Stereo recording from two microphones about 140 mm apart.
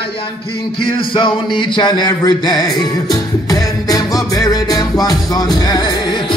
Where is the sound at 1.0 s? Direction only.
35° left (ahead or behind).